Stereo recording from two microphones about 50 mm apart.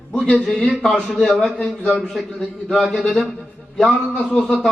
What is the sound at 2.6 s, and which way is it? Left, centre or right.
Speech, centre.